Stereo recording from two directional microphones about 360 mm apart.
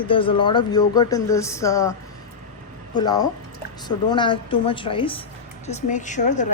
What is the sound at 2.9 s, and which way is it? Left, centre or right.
Speech, centre.